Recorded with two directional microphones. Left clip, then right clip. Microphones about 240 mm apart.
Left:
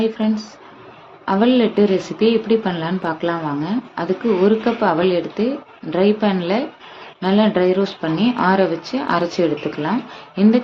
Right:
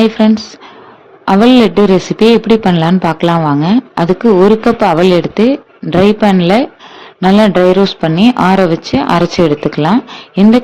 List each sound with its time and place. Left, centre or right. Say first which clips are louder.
0.0 s a man's voice: right 10 dB; right